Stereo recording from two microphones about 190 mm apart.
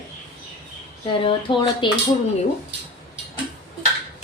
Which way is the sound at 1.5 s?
25° left (ahead or behind).